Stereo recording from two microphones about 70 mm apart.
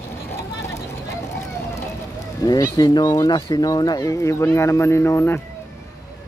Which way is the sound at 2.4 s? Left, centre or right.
Left.